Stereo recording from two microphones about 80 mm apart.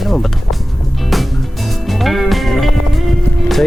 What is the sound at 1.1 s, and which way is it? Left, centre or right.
Music, centre.